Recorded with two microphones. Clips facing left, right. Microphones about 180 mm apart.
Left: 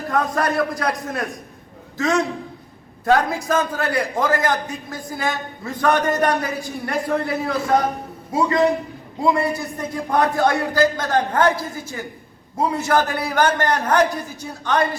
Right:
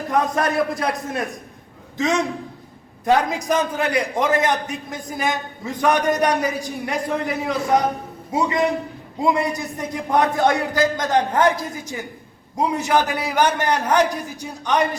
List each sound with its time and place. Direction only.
0.1 s a man's voice: 20° right (ahead or behind)